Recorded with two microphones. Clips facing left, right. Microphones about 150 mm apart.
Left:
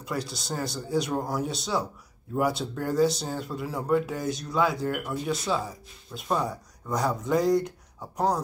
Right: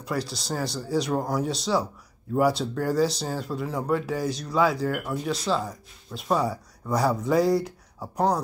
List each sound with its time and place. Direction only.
0.0 s speech: centre (ahead or behind)